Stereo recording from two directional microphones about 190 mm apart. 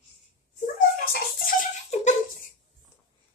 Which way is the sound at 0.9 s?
50° left (ahead or behind).